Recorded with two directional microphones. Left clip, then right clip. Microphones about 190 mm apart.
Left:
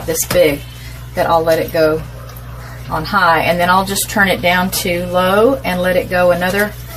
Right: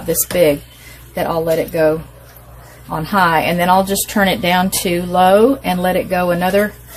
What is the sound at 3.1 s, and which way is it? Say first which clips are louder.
Speech: left 2 dB; 55° right (ahead or behind).